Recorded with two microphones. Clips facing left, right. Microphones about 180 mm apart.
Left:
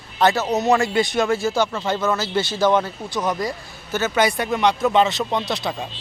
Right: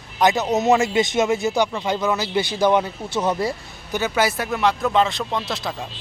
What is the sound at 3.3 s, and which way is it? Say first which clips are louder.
Speech: right 2 dB; 30° right (ahead or behind).